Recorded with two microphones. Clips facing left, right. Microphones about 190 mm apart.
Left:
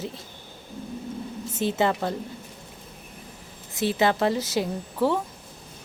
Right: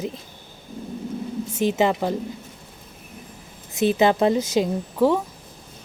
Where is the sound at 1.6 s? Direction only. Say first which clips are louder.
Right 3 dB; 15° right (ahead or behind).